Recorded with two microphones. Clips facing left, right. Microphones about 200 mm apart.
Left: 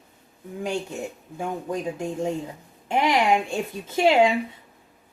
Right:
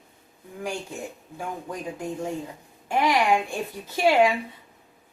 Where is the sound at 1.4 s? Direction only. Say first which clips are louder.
Left 5 dB; 25° left (ahead or behind).